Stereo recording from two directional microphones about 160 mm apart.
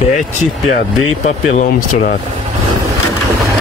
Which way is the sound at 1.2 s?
45° left (ahead or behind).